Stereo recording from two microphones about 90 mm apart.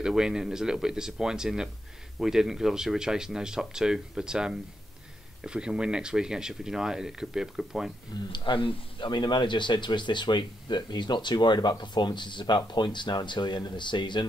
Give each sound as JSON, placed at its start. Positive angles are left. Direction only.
{"t": 0.0, "sound": "speech", "side_deg": -5}
{"t": 8.3, "sound": "speech", "side_deg": 65}